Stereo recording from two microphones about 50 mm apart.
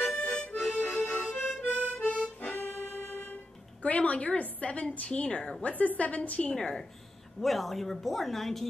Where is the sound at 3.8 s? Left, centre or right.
Left.